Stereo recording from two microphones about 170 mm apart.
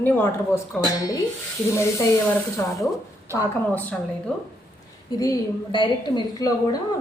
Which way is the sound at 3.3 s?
15° right (ahead or behind).